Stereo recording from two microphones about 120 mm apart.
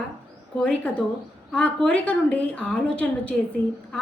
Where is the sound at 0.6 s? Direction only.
10° left (ahead or behind).